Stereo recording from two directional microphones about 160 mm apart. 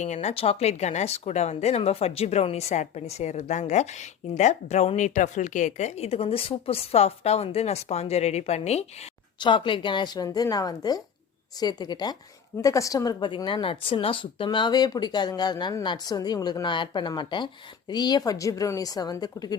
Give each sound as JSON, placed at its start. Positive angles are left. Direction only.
{"t": 0.0, "sound": "speech", "side_deg": 45}
{"t": 9.4, "sound": "a woman's voice", "side_deg": 30}